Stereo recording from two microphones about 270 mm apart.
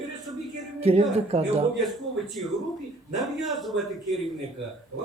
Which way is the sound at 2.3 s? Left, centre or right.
Centre.